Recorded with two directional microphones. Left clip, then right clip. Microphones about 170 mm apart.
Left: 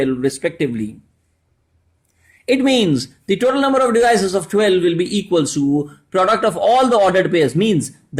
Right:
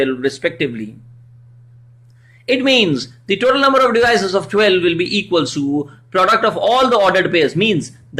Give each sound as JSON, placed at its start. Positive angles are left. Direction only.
{"t": 0.0, "sound": "a man's voice", "side_deg": 50}
{"t": 2.5, "sound": "a man's voice", "side_deg": 50}